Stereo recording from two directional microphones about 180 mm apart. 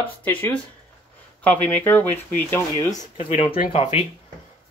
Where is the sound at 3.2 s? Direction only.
30° left (ahead or behind).